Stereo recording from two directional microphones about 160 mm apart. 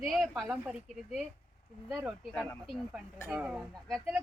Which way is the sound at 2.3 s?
5° left (ahead or behind).